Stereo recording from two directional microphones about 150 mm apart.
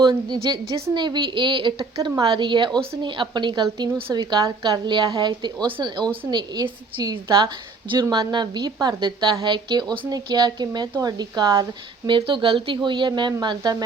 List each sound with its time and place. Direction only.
0.0 s a woman's voice: 30° right (ahead or behind)